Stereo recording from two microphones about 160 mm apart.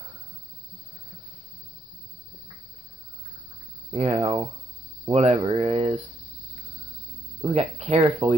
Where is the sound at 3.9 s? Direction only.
40° right (ahead or behind).